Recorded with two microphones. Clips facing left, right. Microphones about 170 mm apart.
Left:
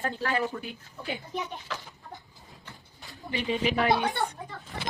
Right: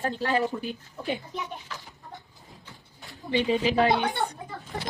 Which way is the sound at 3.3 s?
30° right (ahead or behind).